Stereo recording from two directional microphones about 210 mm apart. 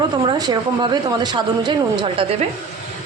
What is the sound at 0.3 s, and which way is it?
Speech, 20° right (ahead or behind).